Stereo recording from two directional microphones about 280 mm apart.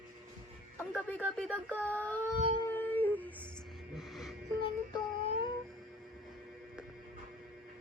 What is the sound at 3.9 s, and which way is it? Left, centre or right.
Music, centre.